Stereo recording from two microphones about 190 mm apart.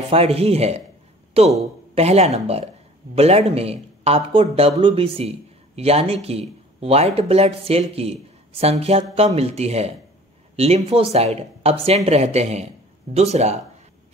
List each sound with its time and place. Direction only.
0.1 s speech: 30° right (ahead or behind)